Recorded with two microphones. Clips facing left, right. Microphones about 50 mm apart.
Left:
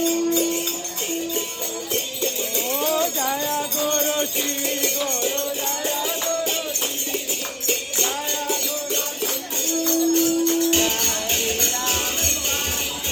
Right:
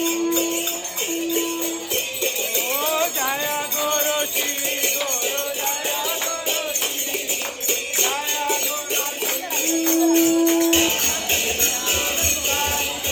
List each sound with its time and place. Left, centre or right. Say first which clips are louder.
2.2 s music: right 1 dB; right
7.9 s music: right 2 dB; right